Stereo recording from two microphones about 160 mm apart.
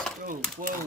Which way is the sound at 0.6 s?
55° right (ahead or behind).